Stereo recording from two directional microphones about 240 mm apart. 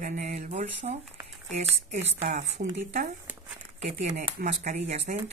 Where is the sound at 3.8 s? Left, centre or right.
Right.